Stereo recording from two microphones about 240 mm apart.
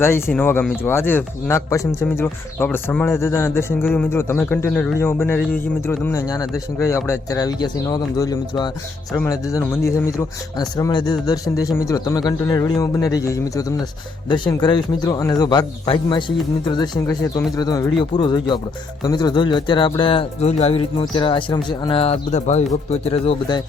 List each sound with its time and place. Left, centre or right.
0.3 s speech: centre